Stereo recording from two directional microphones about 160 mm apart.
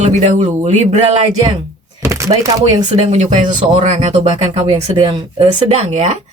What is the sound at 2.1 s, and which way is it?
Chopping, 20° right (ahead or behind).